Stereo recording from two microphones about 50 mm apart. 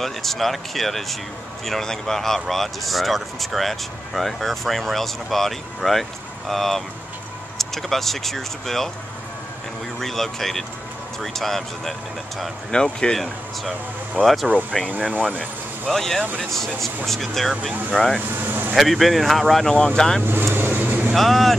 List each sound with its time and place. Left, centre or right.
0.0 s speech: centre
9.9 s speech: centre
15.0 s speech: right
15.9 s speech: centre
18.3 s speech: right
18.8 s speech: centre
20.5 s vehicle: right
21.1 s speech: centre